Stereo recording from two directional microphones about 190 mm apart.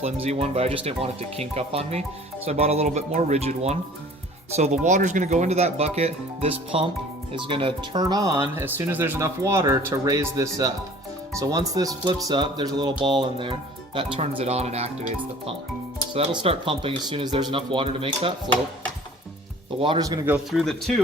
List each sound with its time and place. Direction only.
0.0 s speech: 35° right (ahead or behind); by 10.7 s 15° right (ahead or behind)
11.7 s speech: 20° right (ahead or behind); by 15.1 s 35° right (ahead or behind)
16.1 s speech: 30° right (ahead or behind)
19.8 s speech: 25° right (ahead or behind)
20.3 s speech: centre (ahead or behind)